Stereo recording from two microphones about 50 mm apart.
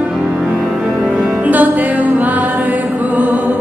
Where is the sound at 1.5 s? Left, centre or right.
Right.